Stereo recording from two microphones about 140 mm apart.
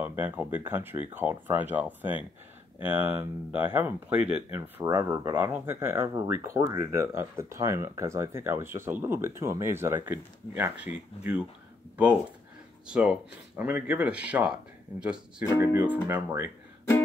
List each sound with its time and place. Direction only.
0.0 s speech: 15° right (ahead or behind)
4.8 s speech: 25° right (ahead or behind); by 11.4 s 10° right (ahead or behind)
12.8 s speech: 5° right (ahead or behind)